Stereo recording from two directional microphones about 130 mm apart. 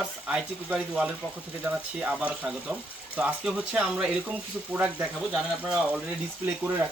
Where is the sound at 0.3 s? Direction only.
10° right (ahead or behind).